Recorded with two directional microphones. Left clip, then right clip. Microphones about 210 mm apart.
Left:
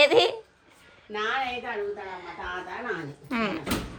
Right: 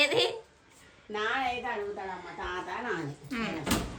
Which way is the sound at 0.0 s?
5° left (ahead or behind).